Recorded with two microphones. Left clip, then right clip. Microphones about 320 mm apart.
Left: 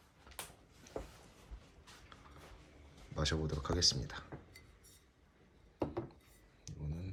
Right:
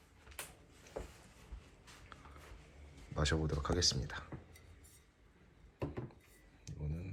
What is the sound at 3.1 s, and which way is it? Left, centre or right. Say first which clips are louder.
Speech: right 1 dB; centre.